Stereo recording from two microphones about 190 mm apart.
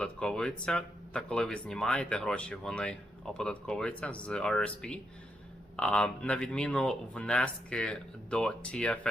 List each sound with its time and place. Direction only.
0.0 s speech: 5° left (ahead or behind)